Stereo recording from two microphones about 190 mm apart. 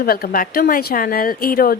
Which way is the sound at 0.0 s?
50° left (ahead or behind).